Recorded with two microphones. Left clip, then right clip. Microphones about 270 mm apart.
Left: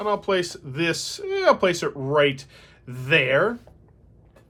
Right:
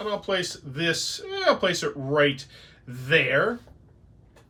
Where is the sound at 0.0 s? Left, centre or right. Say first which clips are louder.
Left 4 dB; left.